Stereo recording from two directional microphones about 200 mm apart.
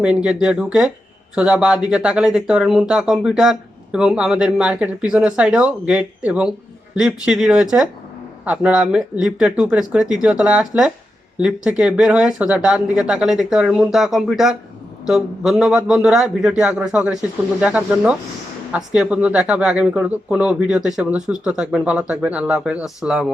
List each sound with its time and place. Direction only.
0.0 s speech: 5° right (ahead or behind)